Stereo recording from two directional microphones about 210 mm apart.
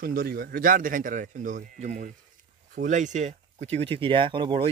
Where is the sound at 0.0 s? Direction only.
45° right (ahead or behind).